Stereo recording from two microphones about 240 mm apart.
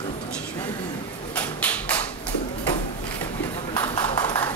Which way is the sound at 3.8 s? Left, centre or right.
Centre.